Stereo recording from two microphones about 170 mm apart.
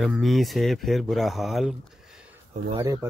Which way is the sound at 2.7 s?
25° right (ahead or behind).